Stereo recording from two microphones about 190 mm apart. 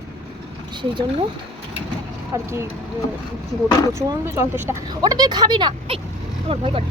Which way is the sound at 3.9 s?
15° right (ahead or behind).